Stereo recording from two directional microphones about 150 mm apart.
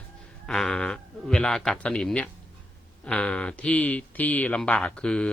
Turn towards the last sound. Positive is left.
turn(degrees=5)  # may be behind; listen again after turning